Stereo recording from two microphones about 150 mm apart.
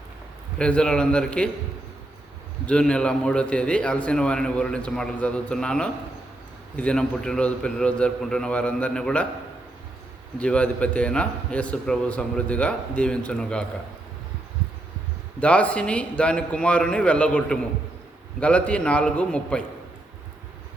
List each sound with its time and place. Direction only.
0.6 s a man's voice: 5° left (ahead or behind)
2.6 s a man's voice: 5° left (ahead or behind)
10.3 s a man's voice: 5° left (ahead or behind)
15.4 s a man's voice: 10° left (ahead or behind)